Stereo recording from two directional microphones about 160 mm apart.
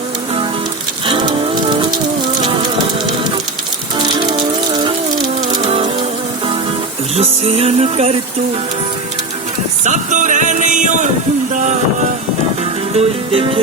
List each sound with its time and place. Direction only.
4.0 s music: 25° right (ahead or behind)
5.6 s a sound: 40° right (ahead or behind)
7.2 s music: 40° right (ahead or behind)
9.8 s music: 50° right (ahead or behind)
13.0 s music: 35° right (ahead or behind)